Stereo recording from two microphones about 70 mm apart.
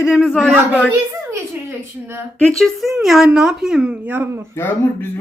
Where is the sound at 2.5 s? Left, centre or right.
Centre.